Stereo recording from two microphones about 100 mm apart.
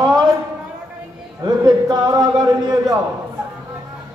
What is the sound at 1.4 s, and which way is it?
A man's voice, 40° right (ahead or behind).